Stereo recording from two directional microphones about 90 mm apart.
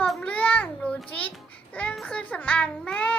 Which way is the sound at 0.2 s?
15° left (ahead or behind).